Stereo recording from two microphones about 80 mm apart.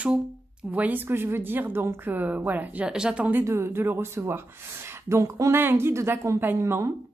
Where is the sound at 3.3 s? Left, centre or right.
Right.